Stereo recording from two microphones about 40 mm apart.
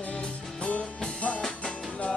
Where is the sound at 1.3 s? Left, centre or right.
Centre.